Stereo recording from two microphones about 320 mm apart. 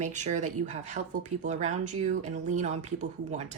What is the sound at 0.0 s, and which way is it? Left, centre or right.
Speech, right.